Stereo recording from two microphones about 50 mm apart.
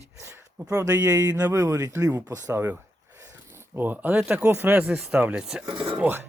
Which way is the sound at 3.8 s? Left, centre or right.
Right.